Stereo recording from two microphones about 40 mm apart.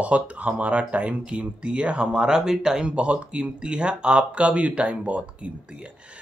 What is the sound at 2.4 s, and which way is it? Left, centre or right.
Speech, centre.